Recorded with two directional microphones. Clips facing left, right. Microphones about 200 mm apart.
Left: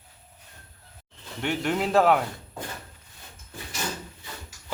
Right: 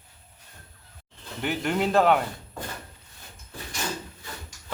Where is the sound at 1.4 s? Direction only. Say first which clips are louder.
Even; centre (ahead or behind).